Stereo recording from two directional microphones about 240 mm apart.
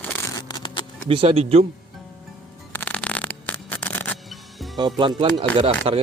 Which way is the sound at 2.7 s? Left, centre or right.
Centre.